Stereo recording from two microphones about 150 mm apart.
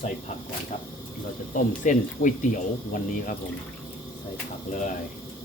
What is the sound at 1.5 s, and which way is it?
Speech, 60° left (ahead or behind).